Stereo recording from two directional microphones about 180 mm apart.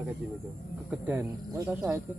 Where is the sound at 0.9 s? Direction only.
10° right (ahead or behind).